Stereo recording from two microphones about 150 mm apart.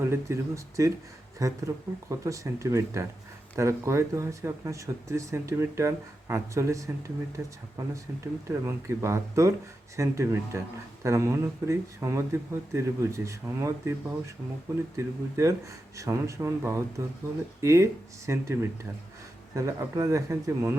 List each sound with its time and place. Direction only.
0.0 s speech: 20° right (ahead or behind)